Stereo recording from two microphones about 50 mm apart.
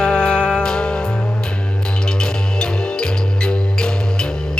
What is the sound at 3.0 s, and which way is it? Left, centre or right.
Music, centre.